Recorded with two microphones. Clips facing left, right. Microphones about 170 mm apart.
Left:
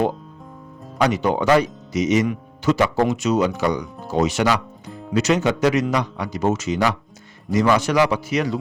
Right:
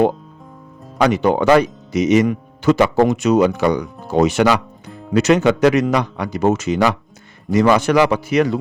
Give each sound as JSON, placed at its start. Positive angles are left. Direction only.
{"t": 0.9, "sound": "speech", "side_deg": -60}